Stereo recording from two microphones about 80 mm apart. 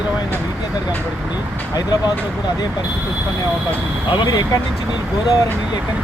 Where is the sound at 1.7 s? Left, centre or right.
Left.